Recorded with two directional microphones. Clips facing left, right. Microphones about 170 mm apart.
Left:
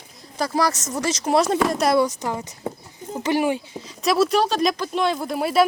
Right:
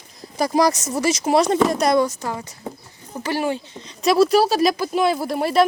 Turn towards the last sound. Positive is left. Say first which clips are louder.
# right 1 dB
turn(degrees=0)  # may be behind; listen again after turning